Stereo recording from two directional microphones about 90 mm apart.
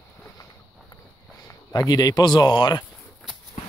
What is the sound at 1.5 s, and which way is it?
Speech, 40° left (ahead or behind).